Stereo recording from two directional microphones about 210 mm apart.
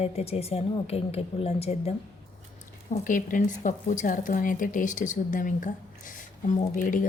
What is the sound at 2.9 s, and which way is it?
A woman's voice, 40° left (ahead or behind).